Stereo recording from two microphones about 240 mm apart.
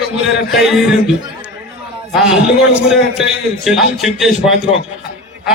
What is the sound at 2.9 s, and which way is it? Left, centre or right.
A man's voice, centre.